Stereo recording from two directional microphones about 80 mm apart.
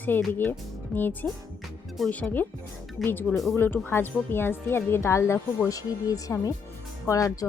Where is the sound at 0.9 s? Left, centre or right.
Centre.